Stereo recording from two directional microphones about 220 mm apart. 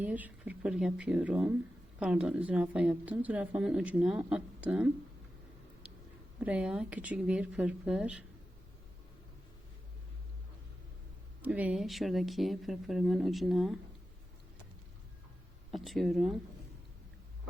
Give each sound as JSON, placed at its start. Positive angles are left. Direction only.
{"t": 0.0, "sound": "speech", "side_deg": -5}
{"t": 6.4, "sound": "speech", "side_deg": -5}
{"t": 11.4, "sound": "speech", "side_deg": -5}
{"t": 15.7, "sound": "speech", "side_deg": 0}